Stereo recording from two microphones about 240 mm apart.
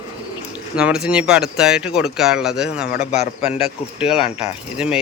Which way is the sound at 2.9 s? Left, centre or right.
Left.